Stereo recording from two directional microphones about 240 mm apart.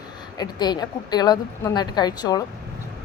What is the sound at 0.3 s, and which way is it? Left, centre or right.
A woman's voice, centre.